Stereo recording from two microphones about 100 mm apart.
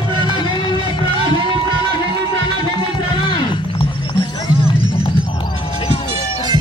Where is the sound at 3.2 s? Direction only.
50° left (ahead or behind).